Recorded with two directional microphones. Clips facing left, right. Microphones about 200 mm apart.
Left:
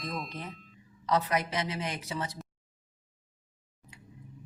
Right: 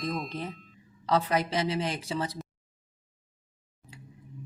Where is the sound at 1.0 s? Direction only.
30° right (ahead or behind).